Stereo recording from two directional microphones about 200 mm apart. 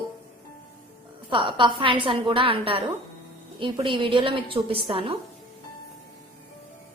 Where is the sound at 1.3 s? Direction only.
25° right (ahead or behind).